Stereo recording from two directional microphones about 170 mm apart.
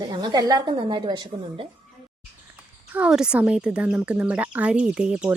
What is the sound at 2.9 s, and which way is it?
Speech, 5° right (ahead or behind).